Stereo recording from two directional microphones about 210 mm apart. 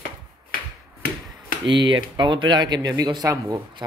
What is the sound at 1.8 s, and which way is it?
Speech, 25° right (ahead or behind).